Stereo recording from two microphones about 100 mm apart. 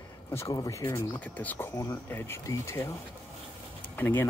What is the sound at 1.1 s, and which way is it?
Speech, 15° left (ahead or behind).